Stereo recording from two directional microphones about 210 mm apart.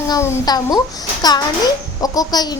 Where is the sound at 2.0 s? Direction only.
15° left (ahead or behind).